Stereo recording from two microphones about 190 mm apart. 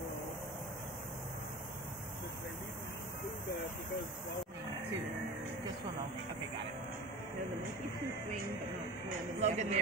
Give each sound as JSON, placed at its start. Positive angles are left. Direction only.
{"t": 9.4, "sound": "a man's voice", "side_deg": -35}